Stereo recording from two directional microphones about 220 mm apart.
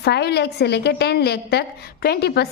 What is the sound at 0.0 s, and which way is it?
A woman's voice, 50° left (ahead or behind).